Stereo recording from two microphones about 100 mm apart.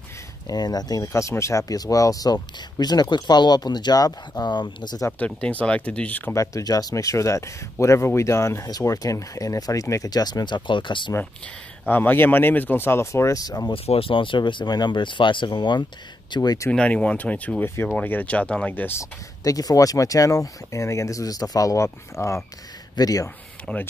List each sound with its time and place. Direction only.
0.5 s speech: 40° left (ahead or behind)
5.2 s speech: 15° left (ahead or behind)
6.3 s speech: 30° left (ahead or behind); by 11.1 s 55° left (ahead or behind)
11.9 s speech: 20° left (ahead or behind); by 13.7 s 40° left (ahead or behind)
13.8 s speech: 70° left (ahead or behind); by 16.6 s 40° left (ahead or behind)
16.7 s speech: 10° left (ahead or behind)
19.4 s speech: 35° left (ahead or behind)
23.6 s speech: 15° left (ahead or behind)